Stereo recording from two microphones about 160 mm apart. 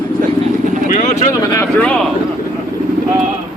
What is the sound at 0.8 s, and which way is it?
Speech, 50° left (ahead or behind).